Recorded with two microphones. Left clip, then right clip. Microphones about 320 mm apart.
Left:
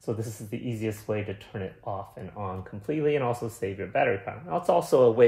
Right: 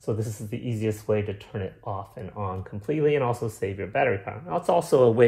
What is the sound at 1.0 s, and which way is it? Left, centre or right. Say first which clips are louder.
A man's voice: right 5 dB; right.